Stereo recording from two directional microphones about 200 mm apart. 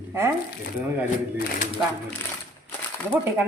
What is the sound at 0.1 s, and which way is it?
Speech, 10° right (ahead or behind).